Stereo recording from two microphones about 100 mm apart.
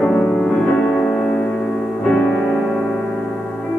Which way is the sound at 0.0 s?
10° left (ahead or behind).